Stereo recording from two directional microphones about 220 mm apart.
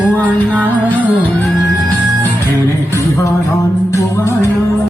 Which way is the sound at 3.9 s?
15° left (ahead or behind).